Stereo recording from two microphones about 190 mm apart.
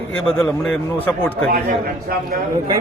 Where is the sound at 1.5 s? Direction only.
50° right (ahead or behind).